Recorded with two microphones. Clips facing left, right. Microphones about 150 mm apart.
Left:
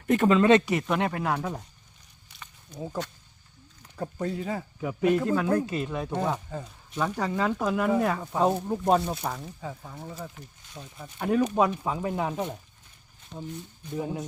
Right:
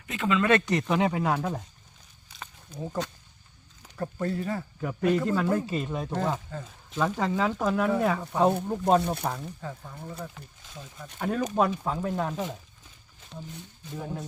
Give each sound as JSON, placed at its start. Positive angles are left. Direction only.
{"t": 0.1, "sound": "speech", "side_deg": 40}
{"t": 0.6, "sound": "speech", "side_deg": 5}
{"t": 2.7, "sound": "speech", "side_deg": 10}
{"t": 13.3, "sound": "speech", "side_deg": 15}